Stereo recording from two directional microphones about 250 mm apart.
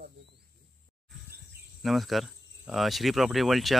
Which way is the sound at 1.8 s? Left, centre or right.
Centre.